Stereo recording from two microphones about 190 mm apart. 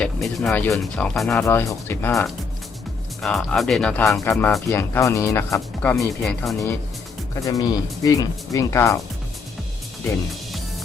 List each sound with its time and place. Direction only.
0.0 s speech: centre (ahead or behind)
1.5 s speech: 15° left (ahead or behind)
7.3 s speech: 15° left (ahead or behind)